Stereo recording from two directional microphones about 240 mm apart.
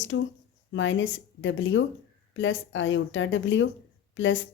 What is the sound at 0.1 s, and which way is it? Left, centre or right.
Speech, left.